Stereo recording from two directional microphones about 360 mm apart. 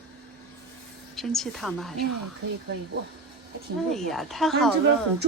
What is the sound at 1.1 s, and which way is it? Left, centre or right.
Speech, centre.